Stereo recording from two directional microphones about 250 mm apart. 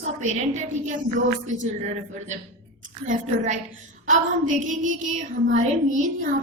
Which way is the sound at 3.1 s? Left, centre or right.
Right.